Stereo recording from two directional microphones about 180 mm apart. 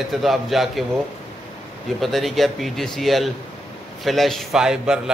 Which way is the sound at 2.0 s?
Centre (ahead or behind).